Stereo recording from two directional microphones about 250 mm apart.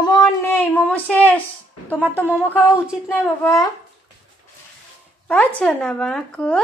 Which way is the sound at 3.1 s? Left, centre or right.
Centre.